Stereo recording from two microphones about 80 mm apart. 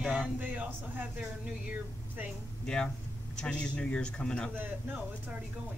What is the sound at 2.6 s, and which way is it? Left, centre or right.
A man's voice, centre.